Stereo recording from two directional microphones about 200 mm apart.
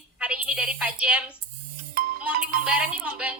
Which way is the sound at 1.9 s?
45° right (ahead or behind).